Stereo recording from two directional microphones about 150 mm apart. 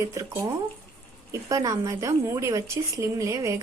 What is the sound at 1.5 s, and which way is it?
Speech, 20° right (ahead or behind).